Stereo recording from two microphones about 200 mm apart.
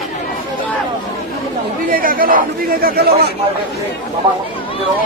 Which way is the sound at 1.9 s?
45° right (ahead or behind).